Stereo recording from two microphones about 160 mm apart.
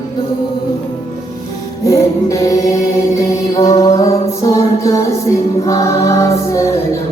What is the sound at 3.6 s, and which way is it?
Music, 20° left (ahead or behind).